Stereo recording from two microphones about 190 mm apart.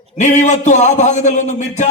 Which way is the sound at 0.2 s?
40° left (ahead or behind).